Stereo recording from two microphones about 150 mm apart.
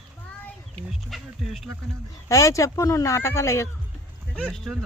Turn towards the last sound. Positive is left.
turn(degrees=0)  # may be behind; listen again after turning